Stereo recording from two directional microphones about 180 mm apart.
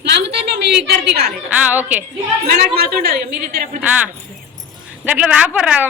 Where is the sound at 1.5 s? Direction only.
10° right (ahead or behind).